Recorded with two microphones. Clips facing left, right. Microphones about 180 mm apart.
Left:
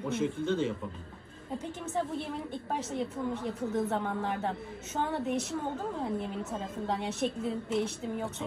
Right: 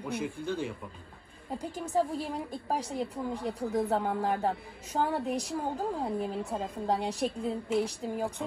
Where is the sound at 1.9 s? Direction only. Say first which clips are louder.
Right 4 dB; 35° right (ahead or behind).